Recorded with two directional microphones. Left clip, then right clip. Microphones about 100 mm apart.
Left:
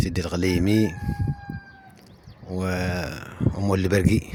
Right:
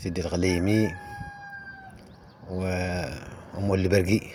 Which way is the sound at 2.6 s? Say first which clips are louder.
Left 2 dB; 70° left (ahead or behind).